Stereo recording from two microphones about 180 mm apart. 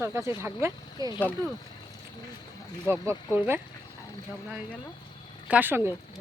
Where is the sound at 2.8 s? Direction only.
15° right (ahead or behind).